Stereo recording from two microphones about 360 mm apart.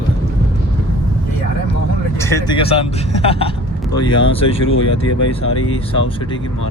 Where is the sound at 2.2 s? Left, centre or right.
Centre.